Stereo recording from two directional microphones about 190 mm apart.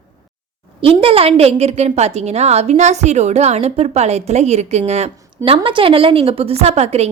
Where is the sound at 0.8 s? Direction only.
30° right (ahead or behind).